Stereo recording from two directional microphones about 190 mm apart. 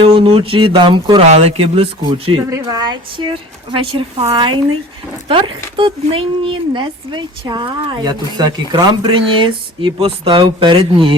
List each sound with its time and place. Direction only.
0.0 s speech: 30° right (ahead or behind)
2.5 s speech: 20° right (ahead or behind)